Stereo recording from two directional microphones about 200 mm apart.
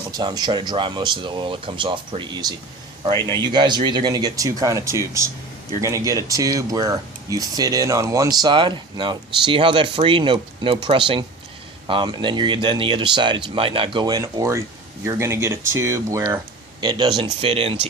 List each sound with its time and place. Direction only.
0.1 s speech: 20° right (ahead or behind)
3.2 s speech: 15° left (ahead or behind)
3.4 s speech: 20° right (ahead or behind)
17.4 s speech: 30° right (ahead or behind)